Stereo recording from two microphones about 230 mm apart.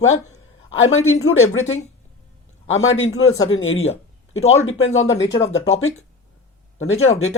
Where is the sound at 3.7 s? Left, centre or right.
Left.